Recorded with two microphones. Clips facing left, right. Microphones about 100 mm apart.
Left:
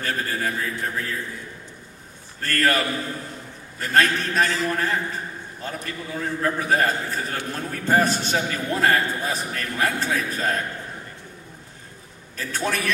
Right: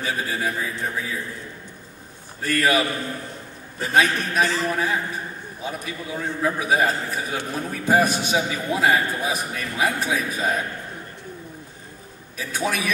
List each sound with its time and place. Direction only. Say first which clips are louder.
0.0 s a man's voice: right 1 dB; 10° right (ahead or behind)
2.4 s a man's voice: right 1 dB; 10° right (ahead or behind)
3.8 s a man's voice: even; 10° right (ahead or behind)
12.4 s a man's voice: right 1 dB; 10° right (ahead or behind)